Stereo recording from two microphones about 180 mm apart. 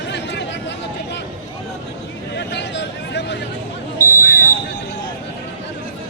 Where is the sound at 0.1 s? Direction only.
75° left (ahead or behind).